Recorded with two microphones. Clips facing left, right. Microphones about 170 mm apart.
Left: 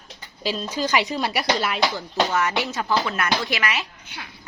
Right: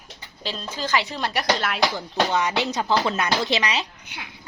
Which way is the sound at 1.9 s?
15° right (ahead or behind).